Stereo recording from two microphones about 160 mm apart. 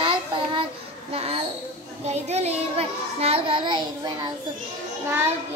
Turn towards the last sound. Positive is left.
turn(degrees=-15)  # may be behind; listen again after turning